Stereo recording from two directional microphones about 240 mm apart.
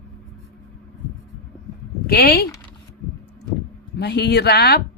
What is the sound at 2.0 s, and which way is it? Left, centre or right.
Speech, left.